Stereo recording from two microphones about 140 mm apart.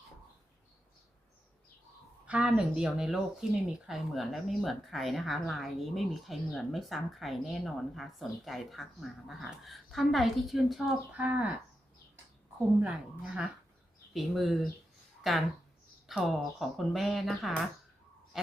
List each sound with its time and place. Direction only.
2.2 s speech: 5° right (ahead or behind)
12.8 s a woman's voice: 5° right (ahead or behind)